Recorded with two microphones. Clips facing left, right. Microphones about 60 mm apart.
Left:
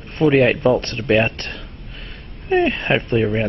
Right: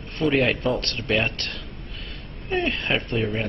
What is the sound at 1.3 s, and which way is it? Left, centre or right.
Speech, left.